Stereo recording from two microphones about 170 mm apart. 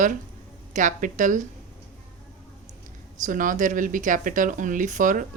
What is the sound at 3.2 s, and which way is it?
Speech, 50° right (ahead or behind).